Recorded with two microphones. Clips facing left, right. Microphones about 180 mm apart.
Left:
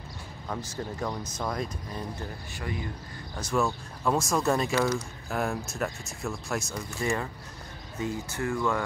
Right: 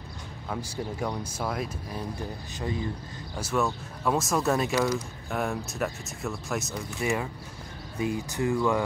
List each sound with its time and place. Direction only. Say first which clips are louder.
0.5 s speech: right 1 dB; 10° right (ahead or behind)
2.6 s speech: right 4 dB; 25° right (ahead or behind)
3.3 s speech: even; 5° right (ahead or behind)
8.0 s speech: right 3 dB; 15° right (ahead or behind)